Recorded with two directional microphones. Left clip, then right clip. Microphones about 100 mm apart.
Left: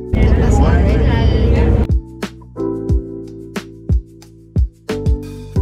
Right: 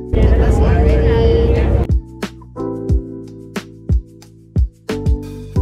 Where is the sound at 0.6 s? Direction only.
10° right (ahead or behind).